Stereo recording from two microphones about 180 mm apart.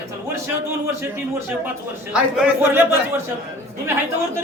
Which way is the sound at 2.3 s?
5° right (ahead or behind).